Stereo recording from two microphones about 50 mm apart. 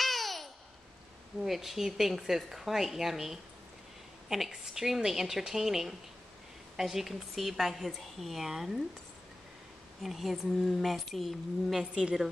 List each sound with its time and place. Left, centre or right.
0.0 s babbling: centre
1.4 s a woman's voice: centre
4.5 s a woman's voice: centre
10.0 s a woman's voice: centre
11.8 s a woman's voice: centre